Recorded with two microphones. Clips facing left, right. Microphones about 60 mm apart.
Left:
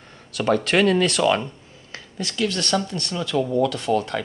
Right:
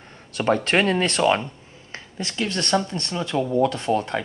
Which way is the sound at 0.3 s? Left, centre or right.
Right.